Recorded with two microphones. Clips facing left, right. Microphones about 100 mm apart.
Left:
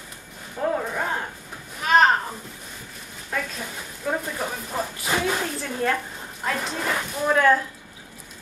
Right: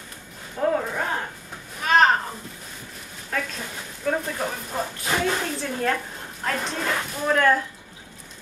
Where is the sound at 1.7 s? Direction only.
Centre (ahead or behind).